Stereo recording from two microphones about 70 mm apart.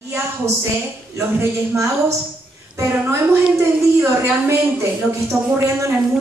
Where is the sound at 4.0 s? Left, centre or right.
Right.